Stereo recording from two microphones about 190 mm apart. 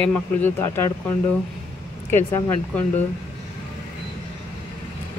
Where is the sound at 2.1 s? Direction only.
15° left (ahead or behind).